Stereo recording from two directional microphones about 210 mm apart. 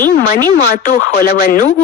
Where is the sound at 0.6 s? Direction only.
50° left (ahead or behind).